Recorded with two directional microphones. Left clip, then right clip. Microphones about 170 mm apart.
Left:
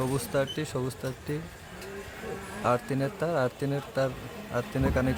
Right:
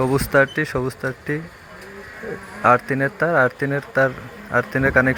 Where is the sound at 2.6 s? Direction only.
15° right (ahead or behind).